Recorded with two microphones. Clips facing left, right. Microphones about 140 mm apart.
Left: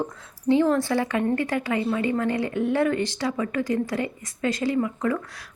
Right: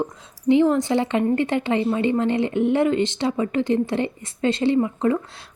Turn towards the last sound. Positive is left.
turn(degrees=-25)  # may be behind; listen again after turning